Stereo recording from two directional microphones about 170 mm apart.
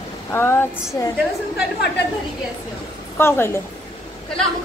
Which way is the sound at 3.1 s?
15° left (ahead or behind).